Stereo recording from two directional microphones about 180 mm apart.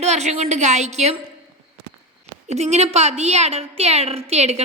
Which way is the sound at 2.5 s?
40° right (ahead or behind).